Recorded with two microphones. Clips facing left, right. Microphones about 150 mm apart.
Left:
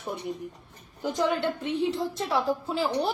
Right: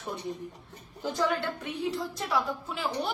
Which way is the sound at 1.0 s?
20° left (ahead or behind).